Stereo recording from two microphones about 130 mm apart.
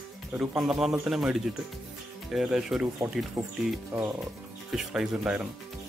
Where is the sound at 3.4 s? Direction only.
25° right (ahead or behind).